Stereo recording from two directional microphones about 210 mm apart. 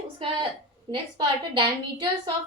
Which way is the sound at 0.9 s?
25° right (ahead or behind).